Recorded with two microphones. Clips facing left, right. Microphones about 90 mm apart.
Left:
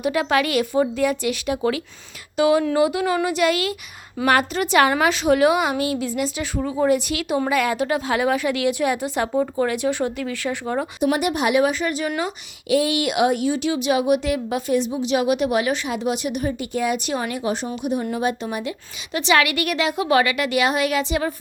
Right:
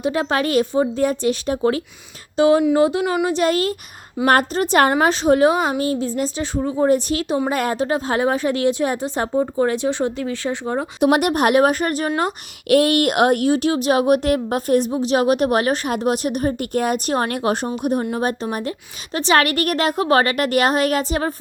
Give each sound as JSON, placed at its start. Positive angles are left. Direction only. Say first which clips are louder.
{"t": 0.0, "sound": "a woman's voice", "louder": "even", "side_deg": -30}
{"t": 6.6, "sound": "speech", "louder": "right 2 dB", "side_deg": -20}
{"t": 6.8, "sound": "a woman's voice", "louder": "right 2 dB", "side_deg": -35}
{"t": 11.0, "sound": "speech", "louder": "right 5 dB", "side_deg": -65}
{"t": 12.6, "sound": "speech", "louder": "right 5 dB", "side_deg": -60}
{"t": 18.1, "sound": "speech", "louder": "right 1 dB", "side_deg": -45}